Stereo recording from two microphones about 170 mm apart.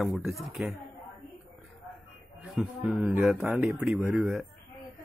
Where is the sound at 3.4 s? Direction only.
15° right (ahead or behind).